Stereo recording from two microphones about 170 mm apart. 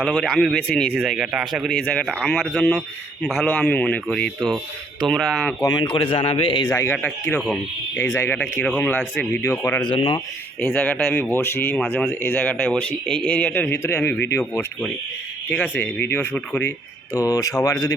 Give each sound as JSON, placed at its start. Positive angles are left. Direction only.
{"t": 0.0, "sound": "speech", "side_deg": 5}
{"t": 5.6, "sound": "speech", "side_deg": 25}
{"t": 6.7, "sound": "speech", "side_deg": 10}
{"t": 9.8, "sound": "speech", "side_deg": 30}
{"t": 10.6, "sound": "speech", "side_deg": 5}
{"t": 17.2, "sound": "speech", "side_deg": 20}